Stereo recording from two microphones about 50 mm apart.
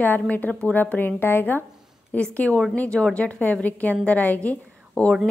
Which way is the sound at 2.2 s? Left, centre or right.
Left.